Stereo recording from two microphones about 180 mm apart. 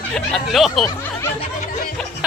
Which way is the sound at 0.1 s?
5° left (ahead or behind).